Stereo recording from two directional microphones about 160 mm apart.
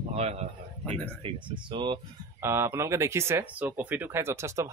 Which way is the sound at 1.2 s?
35° right (ahead or behind).